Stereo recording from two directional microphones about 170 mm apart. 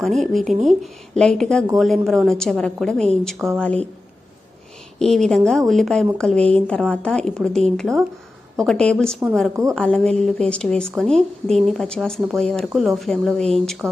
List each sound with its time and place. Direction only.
0.0 s a woman's voice: centre (ahead or behind)
3.3 s a woman's voice: 15° right (ahead or behind)
4.9 s a woman's voice: 5° left (ahead or behind)